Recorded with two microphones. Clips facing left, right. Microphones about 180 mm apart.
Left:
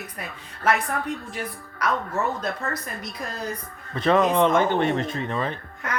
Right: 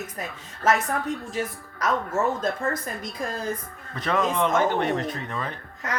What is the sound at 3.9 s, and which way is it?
Speech, 25° left (ahead or behind).